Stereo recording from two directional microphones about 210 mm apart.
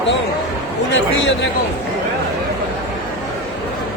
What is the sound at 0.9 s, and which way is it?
Speech, 60° left (ahead or behind).